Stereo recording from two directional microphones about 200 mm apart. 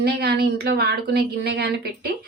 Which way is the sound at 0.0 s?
55° right (ahead or behind).